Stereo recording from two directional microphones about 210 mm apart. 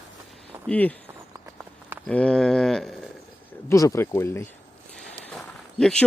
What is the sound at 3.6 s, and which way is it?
Speech, 15° left (ahead or behind).